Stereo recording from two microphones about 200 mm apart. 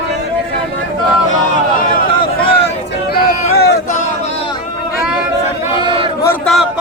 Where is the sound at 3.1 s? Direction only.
55° left (ahead or behind).